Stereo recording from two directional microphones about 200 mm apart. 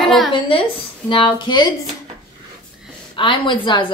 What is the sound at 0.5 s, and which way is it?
Speech, 25° left (ahead or behind).